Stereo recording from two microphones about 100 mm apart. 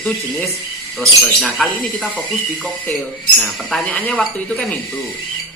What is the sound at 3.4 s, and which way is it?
Speech, centre (ahead or behind).